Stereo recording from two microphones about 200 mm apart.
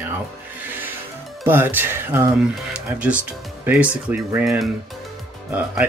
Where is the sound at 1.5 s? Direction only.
10° right (ahead or behind).